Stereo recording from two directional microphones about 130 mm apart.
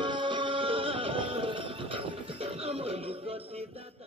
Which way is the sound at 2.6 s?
50° right (ahead or behind).